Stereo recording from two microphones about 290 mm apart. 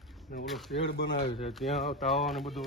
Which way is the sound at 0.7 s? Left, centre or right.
Left.